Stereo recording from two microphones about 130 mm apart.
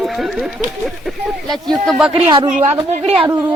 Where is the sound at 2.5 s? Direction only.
60° right (ahead or behind).